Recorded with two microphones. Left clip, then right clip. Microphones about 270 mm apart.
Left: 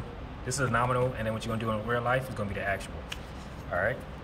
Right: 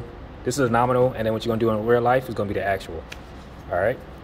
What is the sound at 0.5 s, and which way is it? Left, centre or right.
Speech, right.